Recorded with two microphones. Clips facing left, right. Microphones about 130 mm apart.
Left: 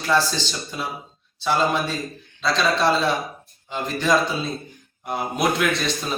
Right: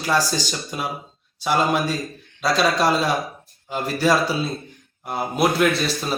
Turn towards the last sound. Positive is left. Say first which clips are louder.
# right 2 dB
turn(degrees=-5)  # may be behind; listen again after turning